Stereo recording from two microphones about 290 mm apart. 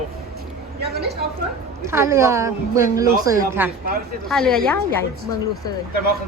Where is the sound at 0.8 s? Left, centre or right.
Right.